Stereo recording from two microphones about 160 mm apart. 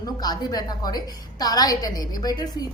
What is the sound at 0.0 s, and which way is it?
A woman's voice, 25° left (ahead or behind).